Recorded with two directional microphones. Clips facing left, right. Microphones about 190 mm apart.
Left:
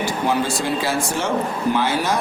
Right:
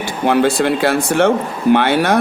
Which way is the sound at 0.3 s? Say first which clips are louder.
Right 9 dB; 65° right (ahead or behind).